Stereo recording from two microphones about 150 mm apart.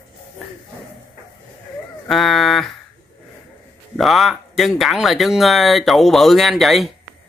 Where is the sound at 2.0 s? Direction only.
Centre (ahead or behind).